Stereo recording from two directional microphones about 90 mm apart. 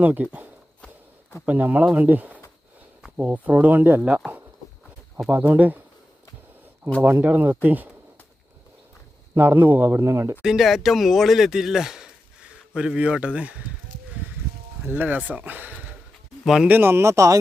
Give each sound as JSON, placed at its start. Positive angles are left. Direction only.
{"t": 0.0, "sound": "speech", "side_deg": -20}
{"t": 5.5, "sound": "speech", "side_deg": -20}
{"t": 7.0, "sound": "speech", "side_deg": -20}
{"t": 9.3, "sound": "speech", "side_deg": -20}
{"t": 10.4, "sound": "speech", "side_deg": -5}
{"t": 14.8, "sound": "speech", "side_deg": -20}